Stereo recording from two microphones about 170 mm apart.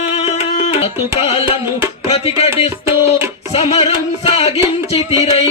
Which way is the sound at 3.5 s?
35° left (ahead or behind).